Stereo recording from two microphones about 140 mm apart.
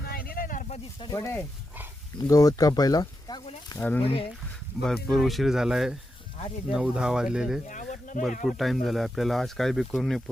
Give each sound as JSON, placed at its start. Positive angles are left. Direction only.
{"t": 0.0, "sound": "a sound", "side_deg": 90}
{"t": 1.0, "sound": "speech", "side_deg": 20}
{"t": 3.8, "sound": "speech", "side_deg": 15}
{"t": 4.0, "sound": "speech", "side_deg": 40}
{"t": 4.8, "sound": "speech", "side_deg": 5}
{"t": 7.7, "sound": "a sound", "side_deg": 65}
{"t": 8.4, "sound": "speech", "side_deg": 0}